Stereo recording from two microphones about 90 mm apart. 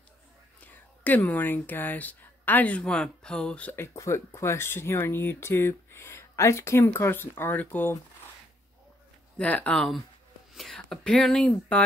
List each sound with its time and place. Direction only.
0.6 s speech: 20° left (ahead or behind)
3.7 s speech: 30° left (ahead or behind)
9.4 s speech: 15° left (ahead or behind)
10.5 s speech: centre (ahead or behind)